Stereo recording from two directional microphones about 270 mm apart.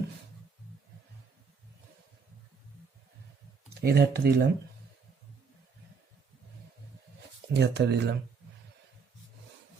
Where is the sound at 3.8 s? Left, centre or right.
Right.